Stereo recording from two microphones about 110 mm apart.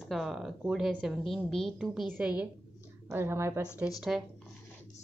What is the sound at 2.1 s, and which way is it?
Speech, 10° right (ahead or behind).